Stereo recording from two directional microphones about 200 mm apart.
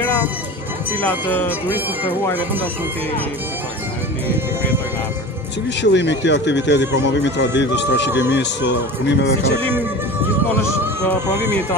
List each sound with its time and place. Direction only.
1.0 s speech: 10° left (ahead or behind)
5.8 s speech: 60° left (ahead or behind)
8.1 s speech: 10° right (ahead or behind)
8.4 s speech: 60° left (ahead or behind)